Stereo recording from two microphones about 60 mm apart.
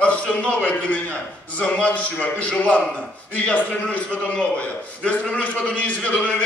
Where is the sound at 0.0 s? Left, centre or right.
Left.